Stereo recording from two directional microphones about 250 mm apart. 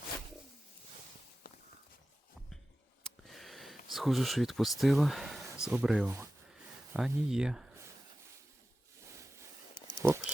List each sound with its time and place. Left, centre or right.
1.5 s walk: left
3.2 s a sound: centre
5.6 s speech: centre
10.0 s speech: centre